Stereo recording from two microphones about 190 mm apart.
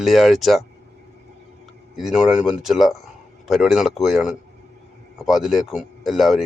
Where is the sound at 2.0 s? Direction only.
Centre (ahead or behind).